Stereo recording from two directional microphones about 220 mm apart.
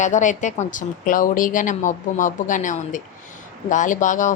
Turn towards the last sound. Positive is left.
turn(degrees=35)  # may be behind; listen again after turning